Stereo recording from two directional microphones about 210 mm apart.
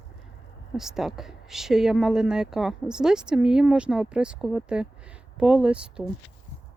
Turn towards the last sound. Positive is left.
turn(degrees=-5)  # may be behind; listen again after turning